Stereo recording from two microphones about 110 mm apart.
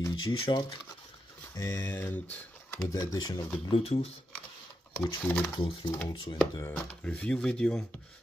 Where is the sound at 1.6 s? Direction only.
25° left (ahead or behind).